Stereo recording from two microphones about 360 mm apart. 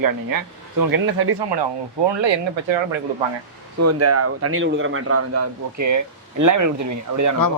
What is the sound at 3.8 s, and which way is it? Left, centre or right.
A man's voice, right.